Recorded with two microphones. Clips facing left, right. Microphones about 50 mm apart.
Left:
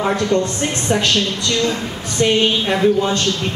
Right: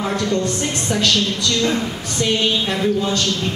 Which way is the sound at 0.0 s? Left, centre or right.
Left.